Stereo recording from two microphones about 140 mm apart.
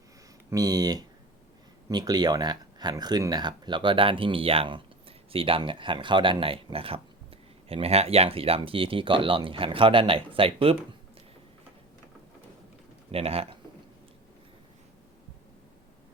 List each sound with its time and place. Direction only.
0.5 s speech: 25° right (ahead or behind)
13.1 s speech: 45° right (ahead or behind)